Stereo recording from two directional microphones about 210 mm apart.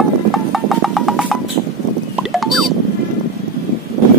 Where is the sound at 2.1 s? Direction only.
Centre (ahead or behind).